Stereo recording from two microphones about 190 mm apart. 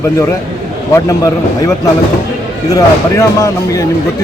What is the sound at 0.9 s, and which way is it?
Speech, 15° left (ahead or behind).